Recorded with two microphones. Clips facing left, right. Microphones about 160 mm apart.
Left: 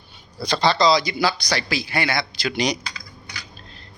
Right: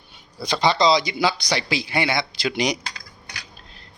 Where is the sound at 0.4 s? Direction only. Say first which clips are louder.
Even; 20° right (ahead or behind).